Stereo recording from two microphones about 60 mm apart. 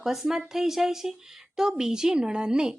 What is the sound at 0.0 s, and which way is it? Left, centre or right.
Speech, centre.